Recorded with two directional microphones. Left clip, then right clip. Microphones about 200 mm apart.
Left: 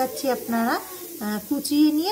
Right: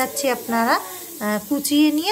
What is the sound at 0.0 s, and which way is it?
Speech, 40° right (ahead or behind).